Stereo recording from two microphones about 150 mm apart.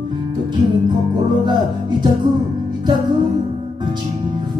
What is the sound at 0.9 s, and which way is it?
Music, 30° right (ahead or behind).